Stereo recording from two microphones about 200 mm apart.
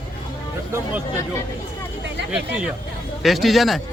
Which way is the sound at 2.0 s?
60° right (ahead or behind).